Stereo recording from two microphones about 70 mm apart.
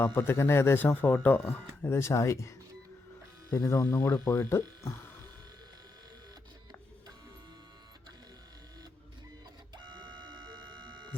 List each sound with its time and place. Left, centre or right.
0.0 s speech: left
1.8 s speech: left
3.5 s speech: left
4.8 s hum: left
9.7 s a sound: right